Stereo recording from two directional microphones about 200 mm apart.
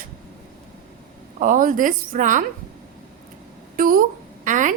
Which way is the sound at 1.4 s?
40° right (ahead or behind).